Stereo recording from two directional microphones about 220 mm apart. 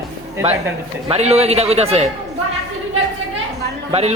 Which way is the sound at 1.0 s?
30° right (ahead or behind).